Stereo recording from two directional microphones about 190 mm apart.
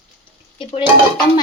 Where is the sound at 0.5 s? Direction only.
25° left (ahead or behind).